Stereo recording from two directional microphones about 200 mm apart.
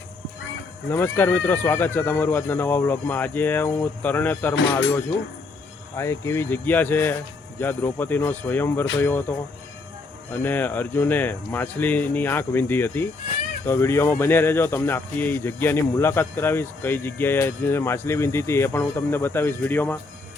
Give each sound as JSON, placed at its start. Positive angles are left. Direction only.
{"t": 0.9, "sound": "speech", "side_deg": 10}
{"t": 6.0, "sound": "speech", "side_deg": 15}
{"t": 10.3, "sound": "speech", "side_deg": 10}